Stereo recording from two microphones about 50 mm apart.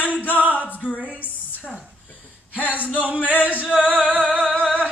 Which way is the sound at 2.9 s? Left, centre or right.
Right.